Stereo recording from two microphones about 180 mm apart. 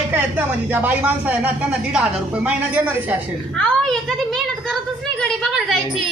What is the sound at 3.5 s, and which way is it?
A child's voice, 5° left (ahead or behind).